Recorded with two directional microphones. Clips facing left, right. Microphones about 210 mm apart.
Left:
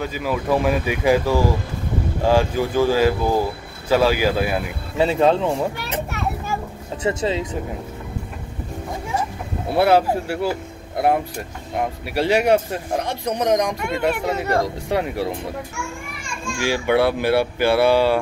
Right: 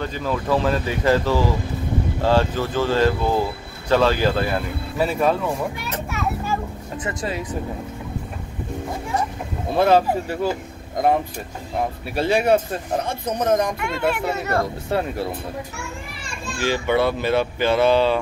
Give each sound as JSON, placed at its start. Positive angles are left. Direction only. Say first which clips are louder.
{"t": 0.0, "sound": "speech", "louder": "left 1 dB", "side_deg": 10}
{"t": 4.9, "sound": "speech", "louder": "left 3 dB", "side_deg": 25}
{"t": 7.0, "sound": "speech", "louder": "left 6 dB", "side_deg": 25}
{"t": 9.7, "sound": "speech", "louder": "left 1 dB", "side_deg": 10}
{"t": 16.4, "sound": "speech", "louder": "left 1 dB", "side_deg": 10}